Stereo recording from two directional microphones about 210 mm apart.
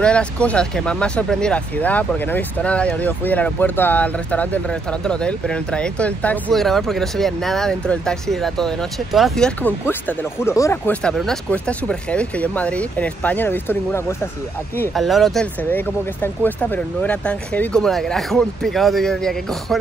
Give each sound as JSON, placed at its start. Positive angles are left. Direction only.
{"t": 0.0, "sound": "speech", "side_deg": 5}
{"t": 14.8, "sound": "speech", "side_deg": 0}